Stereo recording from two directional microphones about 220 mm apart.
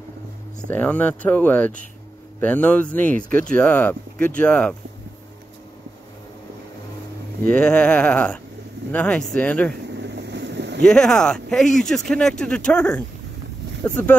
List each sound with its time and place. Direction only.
0.7 s speech: 5° left (ahead or behind)
7.4 s speech: 5° left (ahead or behind)
9.9 s boat: 50° right (ahead or behind)
10.8 s speech: centre (ahead or behind)